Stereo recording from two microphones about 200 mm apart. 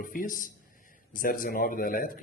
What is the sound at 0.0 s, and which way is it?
A man's voice, 45° left (ahead or behind).